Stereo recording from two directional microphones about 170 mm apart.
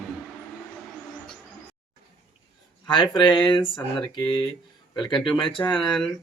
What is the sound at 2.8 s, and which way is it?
Speech, 30° left (ahead or behind).